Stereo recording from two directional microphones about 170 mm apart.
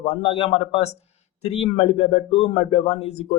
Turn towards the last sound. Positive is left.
turn(degrees=40)  # may be behind; listen again after turning